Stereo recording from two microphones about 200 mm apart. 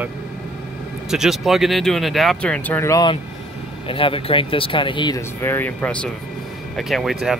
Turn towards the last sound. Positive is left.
turn(degrees=0)  # may be behind; listen again after turning